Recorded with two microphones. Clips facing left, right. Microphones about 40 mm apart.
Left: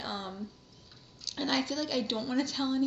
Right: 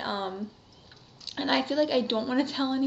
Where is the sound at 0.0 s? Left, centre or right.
Right.